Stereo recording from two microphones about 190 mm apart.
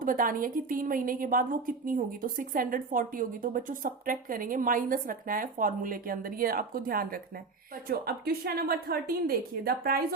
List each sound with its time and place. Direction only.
0.0 s a woman's voice: 45° right (ahead or behind)